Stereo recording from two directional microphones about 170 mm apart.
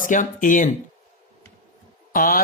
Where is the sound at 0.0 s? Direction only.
50° left (ahead or behind).